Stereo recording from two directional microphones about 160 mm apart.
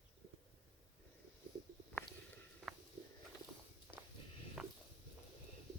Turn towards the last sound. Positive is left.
turn(degrees=-5)  # may be behind; listen again after turning